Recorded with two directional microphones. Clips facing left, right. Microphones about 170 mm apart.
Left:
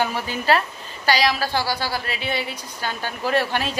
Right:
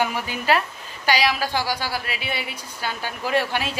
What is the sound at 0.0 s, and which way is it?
A woman's voice, 10° right (ahead or behind).